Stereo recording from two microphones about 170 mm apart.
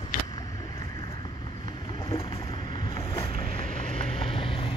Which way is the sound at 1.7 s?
30° left (ahead or behind).